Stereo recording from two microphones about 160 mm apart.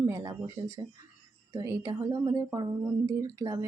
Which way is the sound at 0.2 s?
20° right (ahead or behind).